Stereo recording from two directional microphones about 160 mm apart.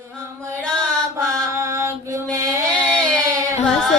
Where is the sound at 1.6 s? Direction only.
15° right (ahead or behind).